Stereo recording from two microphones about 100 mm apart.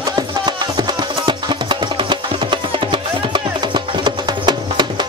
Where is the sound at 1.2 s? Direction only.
50° right (ahead or behind).